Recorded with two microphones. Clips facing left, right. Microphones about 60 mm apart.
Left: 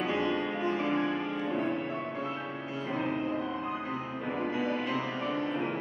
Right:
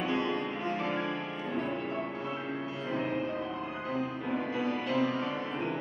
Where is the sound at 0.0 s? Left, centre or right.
Centre.